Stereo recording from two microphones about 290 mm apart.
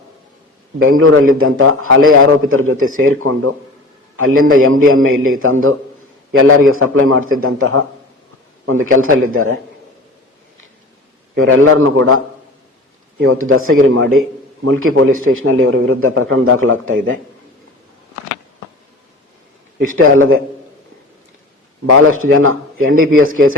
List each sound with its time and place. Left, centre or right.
0.8 s a man's voice: right
11.3 s a man's voice: right
20.0 s a man's voice: right
22.2 s a man's voice: right